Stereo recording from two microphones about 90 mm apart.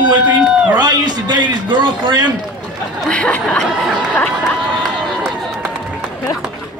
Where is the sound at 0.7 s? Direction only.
50° right (ahead or behind).